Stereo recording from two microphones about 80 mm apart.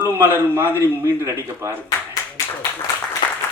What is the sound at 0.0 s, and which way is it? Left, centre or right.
A man's voice, right.